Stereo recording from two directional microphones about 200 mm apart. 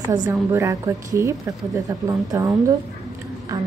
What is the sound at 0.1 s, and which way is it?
A woman's voice, 15° right (ahead or behind).